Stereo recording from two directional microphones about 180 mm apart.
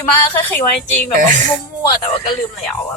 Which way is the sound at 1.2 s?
45° right (ahead or behind).